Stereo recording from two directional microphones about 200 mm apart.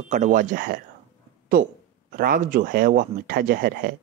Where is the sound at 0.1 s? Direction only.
40° right (ahead or behind).